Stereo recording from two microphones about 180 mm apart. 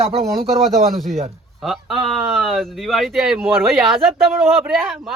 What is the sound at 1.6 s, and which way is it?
Speech, centre (ahead or behind).